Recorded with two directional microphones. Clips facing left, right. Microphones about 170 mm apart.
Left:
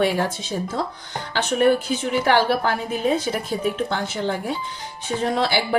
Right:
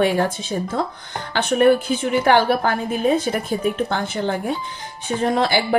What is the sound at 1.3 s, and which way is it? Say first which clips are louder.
A woman's voice: right 3 dB; 55° right (ahead or behind).